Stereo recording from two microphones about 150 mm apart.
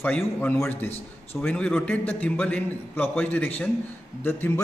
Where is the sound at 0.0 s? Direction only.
10° left (ahead or behind).